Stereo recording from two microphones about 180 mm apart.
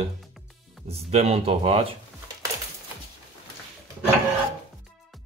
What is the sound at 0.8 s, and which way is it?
Speech, 35° right (ahead or behind).